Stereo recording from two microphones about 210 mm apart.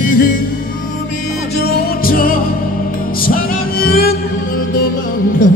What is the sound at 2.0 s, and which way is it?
Music, 45° left (ahead or behind).